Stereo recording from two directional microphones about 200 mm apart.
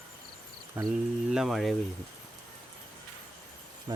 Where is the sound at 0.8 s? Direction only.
15° right (ahead or behind).